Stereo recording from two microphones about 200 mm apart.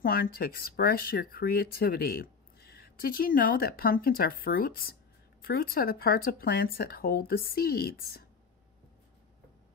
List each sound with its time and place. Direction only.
0.0 s speech: 45° left (ahead or behind)